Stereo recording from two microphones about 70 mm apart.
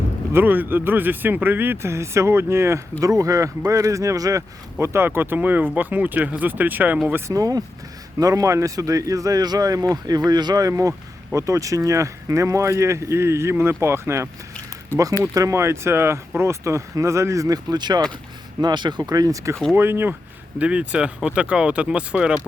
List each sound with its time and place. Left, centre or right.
0.3 s speech: right
3.0 s speech: right
7.3 s speech: right
10.2 s speech: right
19.7 s speech: right
20.6 s speech: centre